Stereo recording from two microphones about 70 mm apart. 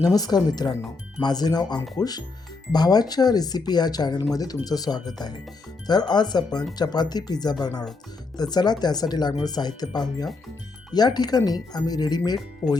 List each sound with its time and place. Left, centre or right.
0.0 s speech: left
4.4 s speech: left
8.4 s speech: left
12.6 s speech: left